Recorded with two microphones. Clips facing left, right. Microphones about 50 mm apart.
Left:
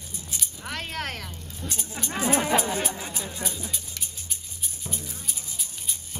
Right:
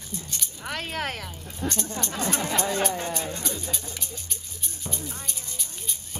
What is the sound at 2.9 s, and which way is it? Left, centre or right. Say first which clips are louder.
Speech: right 5 dB; right.